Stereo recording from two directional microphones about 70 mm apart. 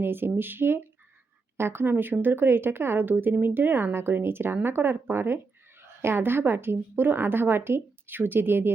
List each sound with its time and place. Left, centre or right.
0.0 s a woman's voice: right